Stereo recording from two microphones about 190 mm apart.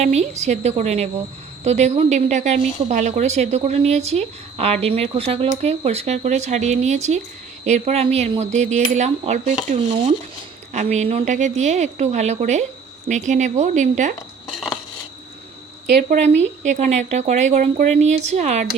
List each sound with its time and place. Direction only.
0.0 s speech: 35° right (ahead or behind)
15.9 s speech: 60° right (ahead or behind)
16.4 s speech: 40° right (ahead or behind)